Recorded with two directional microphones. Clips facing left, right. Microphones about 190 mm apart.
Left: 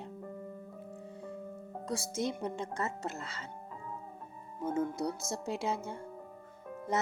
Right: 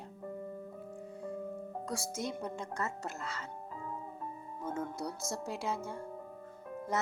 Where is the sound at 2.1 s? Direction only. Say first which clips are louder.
Left 3 dB; 20° left (ahead or behind).